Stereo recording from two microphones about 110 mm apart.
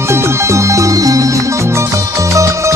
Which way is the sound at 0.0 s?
25° right (ahead or behind).